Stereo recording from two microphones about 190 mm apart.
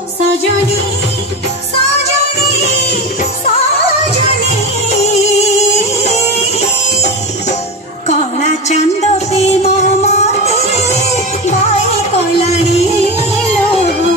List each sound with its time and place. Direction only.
5.0 s music: 35° left (ahead or behind)
8.1 s music: 35° left (ahead or behind)